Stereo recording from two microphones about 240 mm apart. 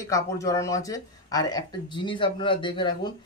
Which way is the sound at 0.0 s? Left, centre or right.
Centre.